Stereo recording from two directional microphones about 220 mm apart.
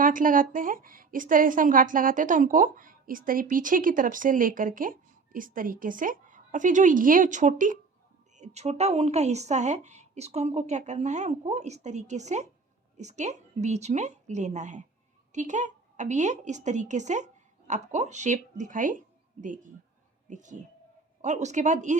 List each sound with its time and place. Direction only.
0.0 s a woman's voice: 40° right (ahead or behind)